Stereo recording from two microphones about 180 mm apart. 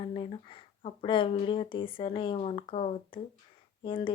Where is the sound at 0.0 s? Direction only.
30° left (ahead or behind).